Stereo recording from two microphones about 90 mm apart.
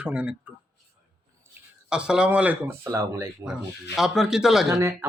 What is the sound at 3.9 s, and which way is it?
Speech, 5° right (ahead or behind).